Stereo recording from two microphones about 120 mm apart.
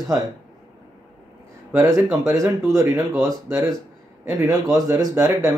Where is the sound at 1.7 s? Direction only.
25° right (ahead or behind).